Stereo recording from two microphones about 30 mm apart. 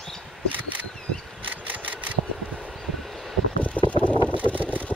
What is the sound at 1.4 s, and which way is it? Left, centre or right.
Vehicle, right.